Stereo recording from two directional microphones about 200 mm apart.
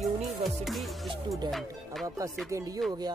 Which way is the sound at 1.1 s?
20° right (ahead or behind).